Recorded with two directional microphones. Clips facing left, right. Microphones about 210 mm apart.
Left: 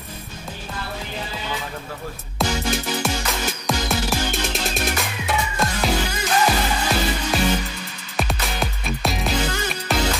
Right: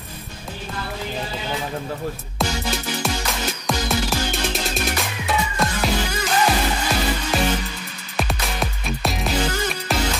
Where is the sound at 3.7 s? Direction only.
Centre (ahead or behind).